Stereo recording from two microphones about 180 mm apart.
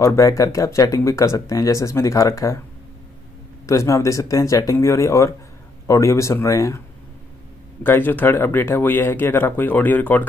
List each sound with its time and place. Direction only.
0.0 s speech: 15° left (ahead or behind)
3.6 s speech: 15° left (ahead or behind)
7.8 s speech: 10° left (ahead or behind)